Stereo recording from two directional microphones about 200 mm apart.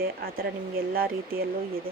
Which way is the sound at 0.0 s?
50° right (ahead or behind).